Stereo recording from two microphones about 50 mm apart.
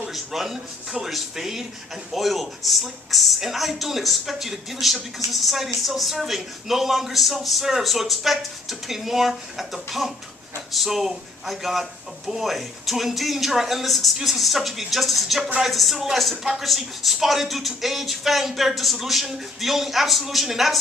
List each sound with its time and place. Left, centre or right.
0.1 s speech: centre